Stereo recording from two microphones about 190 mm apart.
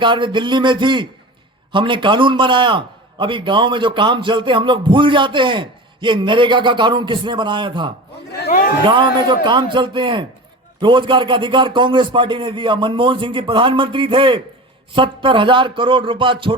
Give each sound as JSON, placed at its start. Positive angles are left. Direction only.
{"t": 0.0, "sound": "a man's voice", "side_deg": -25}
{"t": 8.4, "sound": "speech", "side_deg": 50}
{"t": 8.9, "sound": "a man's voice", "side_deg": -25}